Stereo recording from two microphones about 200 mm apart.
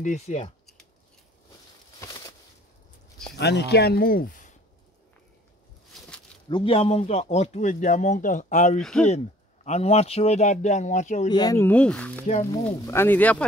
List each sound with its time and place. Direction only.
0.0 s speech: 35° left (ahead or behind)
3.3 s speech: 55° left (ahead or behind); by 4.6 s 40° left (ahead or behind)
6.5 s speech: 25° left (ahead or behind)
11.2 s speech: 20° left (ahead or behind)